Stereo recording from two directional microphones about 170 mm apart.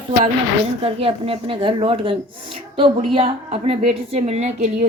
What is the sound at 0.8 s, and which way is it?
Speech, 35° right (ahead or behind).